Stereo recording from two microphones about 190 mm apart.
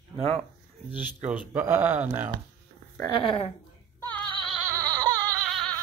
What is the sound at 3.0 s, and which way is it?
Speech, 25° left (ahead or behind).